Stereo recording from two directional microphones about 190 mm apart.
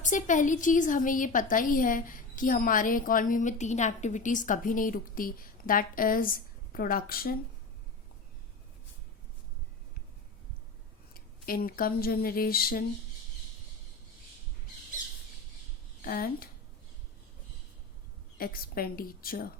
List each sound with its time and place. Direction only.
0.0 s a woman's voice: 40° left (ahead or behind)
11.1 s speech: 50° left (ahead or behind)
16.0 s speech: 50° left (ahead or behind)
18.3 s a woman's voice: 50° left (ahead or behind)